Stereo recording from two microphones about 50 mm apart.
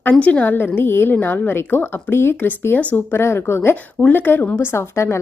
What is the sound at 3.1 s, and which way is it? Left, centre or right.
Speech, left.